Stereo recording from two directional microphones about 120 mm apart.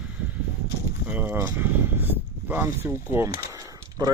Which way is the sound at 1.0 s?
15° right (ahead or behind).